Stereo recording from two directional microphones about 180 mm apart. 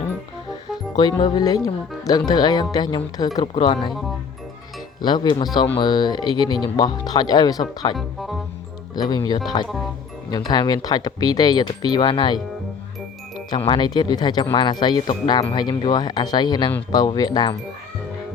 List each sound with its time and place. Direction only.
0.9 s speech: 25° left (ahead or behind)
5.0 s speech: 25° left (ahead or behind)
7.9 s speech: centre (ahead or behind)
9.0 s speech: 20° left (ahead or behind)
13.5 s speech: 25° left (ahead or behind)